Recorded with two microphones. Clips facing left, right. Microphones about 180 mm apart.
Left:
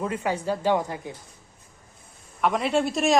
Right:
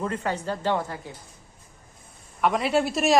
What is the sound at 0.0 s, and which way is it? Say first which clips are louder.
Speech: left 1 dB; 10° left (ahead or behind).